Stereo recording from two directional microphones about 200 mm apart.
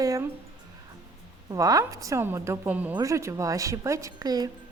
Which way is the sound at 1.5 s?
15° right (ahead or behind).